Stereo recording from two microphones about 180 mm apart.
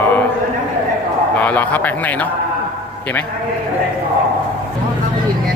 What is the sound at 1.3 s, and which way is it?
Speech, 10° left (ahead or behind).